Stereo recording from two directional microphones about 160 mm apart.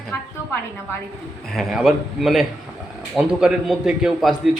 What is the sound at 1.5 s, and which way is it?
A woman's voice, centre (ahead or behind).